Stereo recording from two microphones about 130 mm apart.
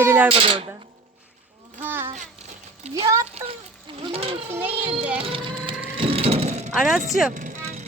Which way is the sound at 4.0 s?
40° right (ahead or behind).